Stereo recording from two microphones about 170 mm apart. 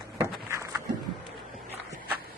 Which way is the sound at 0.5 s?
15° right (ahead or behind).